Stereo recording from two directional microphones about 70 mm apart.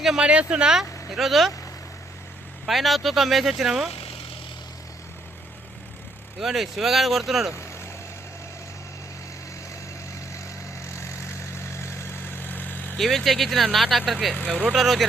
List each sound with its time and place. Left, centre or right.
0.0 s speech: centre
2.6 s speech: centre
6.4 s speech: centre
7.5 s vehicle: left
10.8 s vehicle: left
13.0 s speech: centre